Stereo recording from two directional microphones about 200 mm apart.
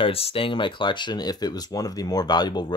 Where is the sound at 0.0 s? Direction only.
30° left (ahead or behind).